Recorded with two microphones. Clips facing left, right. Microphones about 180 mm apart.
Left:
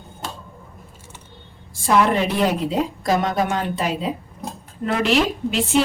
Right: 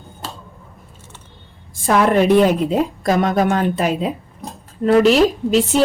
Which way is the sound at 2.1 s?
50° right (ahead or behind).